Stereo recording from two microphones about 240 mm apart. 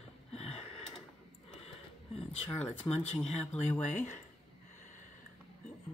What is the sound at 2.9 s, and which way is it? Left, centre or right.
Speech, centre.